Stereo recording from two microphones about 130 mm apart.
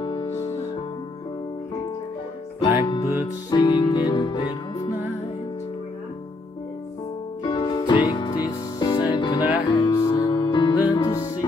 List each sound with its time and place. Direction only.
0.0 s music: 35° left (ahead or behind)
0.3 s music: 20° left (ahead or behind)
2.6 s music: 45° left (ahead or behind)
3.2 s music: 30° left (ahead or behind)
7.4 s music: 35° left (ahead or behind)
10.3 s music: 35° left (ahead or behind)
11.0 s music: 20° left (ahead or behind)